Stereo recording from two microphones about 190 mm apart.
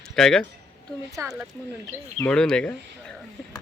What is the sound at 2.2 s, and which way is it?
Speech, 5° left (ahead or behind).